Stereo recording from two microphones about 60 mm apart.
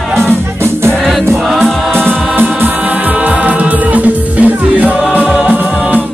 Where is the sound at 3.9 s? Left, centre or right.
Right.